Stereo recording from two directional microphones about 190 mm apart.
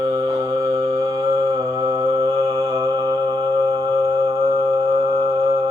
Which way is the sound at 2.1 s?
30° right (ahead or behind).